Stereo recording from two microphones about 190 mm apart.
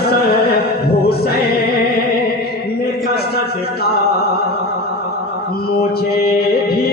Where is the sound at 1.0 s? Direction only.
55° left (ahead or behind).